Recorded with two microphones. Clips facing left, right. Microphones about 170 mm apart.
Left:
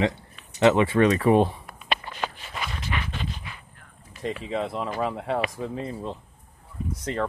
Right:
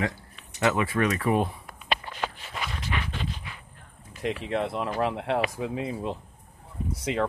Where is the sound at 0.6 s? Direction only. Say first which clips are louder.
Left 6 dB; 25° left (ahead or behind).